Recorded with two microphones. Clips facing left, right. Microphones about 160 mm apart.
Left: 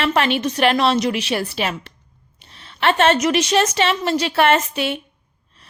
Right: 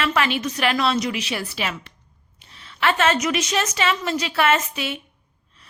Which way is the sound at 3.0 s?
60° left (ahead or behind).